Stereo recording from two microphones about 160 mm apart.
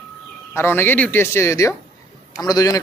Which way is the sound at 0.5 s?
15° left (ahead or behind).